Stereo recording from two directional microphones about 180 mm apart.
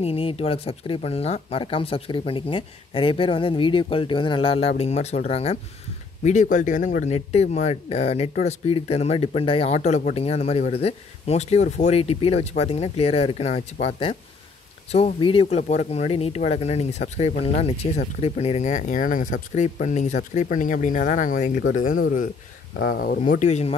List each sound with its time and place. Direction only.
0.0 s speech: 30° left (ahead or behind); by 7.2 s 45° left (ahead or behind)
7.2 s speech: 35° left (ahead or behind)